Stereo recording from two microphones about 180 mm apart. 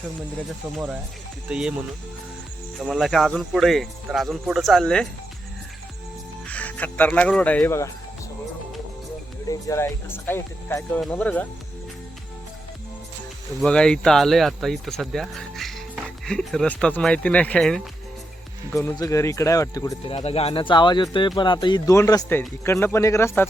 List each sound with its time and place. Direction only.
1.5 s speech: 5° right (ahead or behind)
2.7 s speech: centre (ahead or behind)
6.5 s speech: 10° left (ahead or behind)
9.5 s speech: 15° left (ahead or behind)
13.6 s speech: 5° left (ahead or behind)
18.7 s speech: 15° left (ahead or behind)
20.1 s speech: 30° left (ahead or behind); by 23.5 s 15° left (ahead or behind)